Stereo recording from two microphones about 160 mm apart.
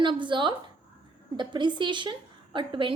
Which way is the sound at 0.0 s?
30° right (ahead or behind).